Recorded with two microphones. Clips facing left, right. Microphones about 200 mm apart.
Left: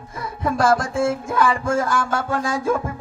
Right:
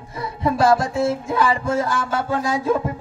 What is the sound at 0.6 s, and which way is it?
Music, 50° left (ahead or behind).